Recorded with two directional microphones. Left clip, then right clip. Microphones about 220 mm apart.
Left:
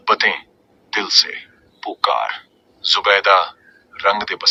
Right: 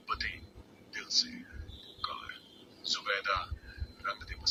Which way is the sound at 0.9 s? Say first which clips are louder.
Left 17 dB; 40° left (ahead or behind).